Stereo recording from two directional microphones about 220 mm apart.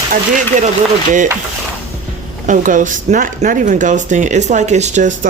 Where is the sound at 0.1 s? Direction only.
35° right (ahead or behind).